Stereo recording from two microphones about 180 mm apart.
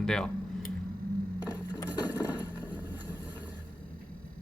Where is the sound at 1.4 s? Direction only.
25° left (ahead or behind).